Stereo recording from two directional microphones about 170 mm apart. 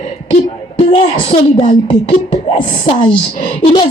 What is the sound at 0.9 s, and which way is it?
A woman's voice, 30° left (ahead or behind).